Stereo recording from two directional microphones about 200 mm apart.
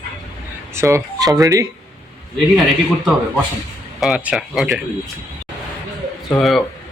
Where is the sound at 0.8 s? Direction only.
15° right (ahead or behind).